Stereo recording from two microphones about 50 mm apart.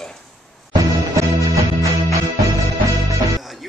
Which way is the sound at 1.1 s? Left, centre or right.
Right.